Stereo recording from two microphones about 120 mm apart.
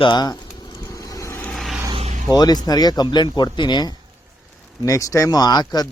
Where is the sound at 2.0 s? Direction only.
65° right (ahead or behind).